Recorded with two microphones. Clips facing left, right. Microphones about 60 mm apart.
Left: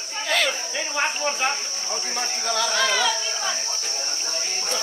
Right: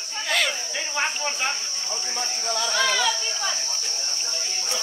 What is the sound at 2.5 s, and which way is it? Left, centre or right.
Speech, left.